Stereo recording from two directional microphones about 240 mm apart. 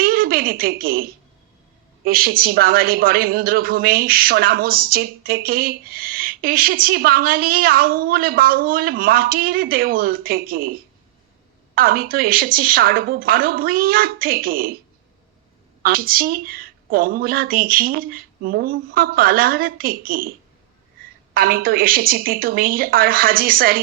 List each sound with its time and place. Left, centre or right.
0.0 s a sound: right
2.0 s a woman's voice: right
15.8 s a woman's voice: right
21.3 s a woman's voice: right